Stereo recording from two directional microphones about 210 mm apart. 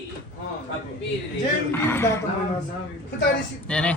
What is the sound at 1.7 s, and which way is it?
Speech, 10° left (ahead or behind).